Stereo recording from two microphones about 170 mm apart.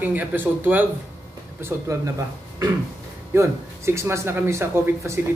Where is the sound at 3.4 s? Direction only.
15° right (ahead or behind).